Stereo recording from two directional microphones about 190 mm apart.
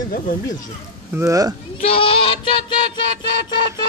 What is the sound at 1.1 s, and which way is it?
Speech, 15° right (ahead or behind).